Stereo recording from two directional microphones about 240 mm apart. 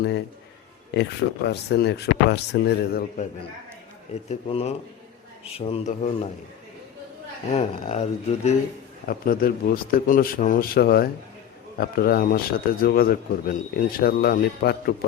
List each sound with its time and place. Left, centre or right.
0.9 s speech: left
4.3 s speech: left
7.5 s a man's voice: left